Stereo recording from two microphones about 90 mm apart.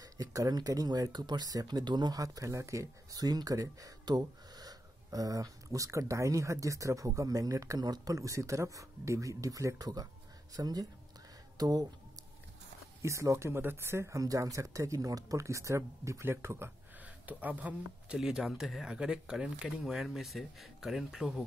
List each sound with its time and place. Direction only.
0.0 s speech: 45° right (ahead or behind)
13.0 s speech: 35° right (ahead or behind); by 21.5 s 5° right (ahead or behind)